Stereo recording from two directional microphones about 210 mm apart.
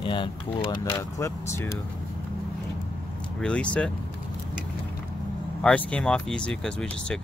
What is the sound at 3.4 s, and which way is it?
Speech, 5° left (ahead or behind).